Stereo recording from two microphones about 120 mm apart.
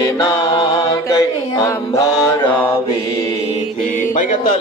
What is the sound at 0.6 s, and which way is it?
Mantra, 45° left (ahead or behind).